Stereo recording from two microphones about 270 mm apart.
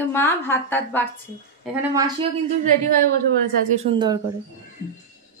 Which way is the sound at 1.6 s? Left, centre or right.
Centre.